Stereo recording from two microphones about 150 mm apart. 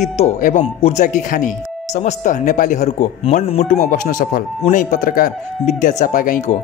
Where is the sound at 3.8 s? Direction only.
65° left (ahead or behind).